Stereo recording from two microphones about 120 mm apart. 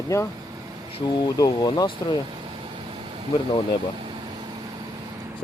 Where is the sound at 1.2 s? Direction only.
35° left (ahead or behind).